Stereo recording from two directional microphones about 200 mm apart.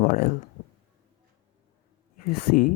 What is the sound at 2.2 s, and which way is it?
Speech, 45° left (ahead or behind).